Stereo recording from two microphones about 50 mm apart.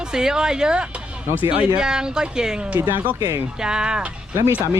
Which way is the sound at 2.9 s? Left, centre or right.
Right.